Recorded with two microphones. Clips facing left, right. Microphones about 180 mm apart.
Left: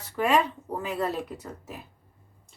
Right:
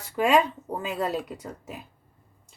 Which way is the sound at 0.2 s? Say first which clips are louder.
Right 2 dB; 20° right (ahead or behind).